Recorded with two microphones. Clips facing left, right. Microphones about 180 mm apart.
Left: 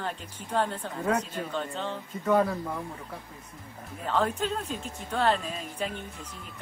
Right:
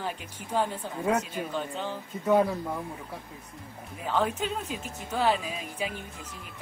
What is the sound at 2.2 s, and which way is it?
Speech, 15° right (ahead or behind).